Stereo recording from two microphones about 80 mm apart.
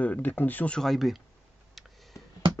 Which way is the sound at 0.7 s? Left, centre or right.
Centre.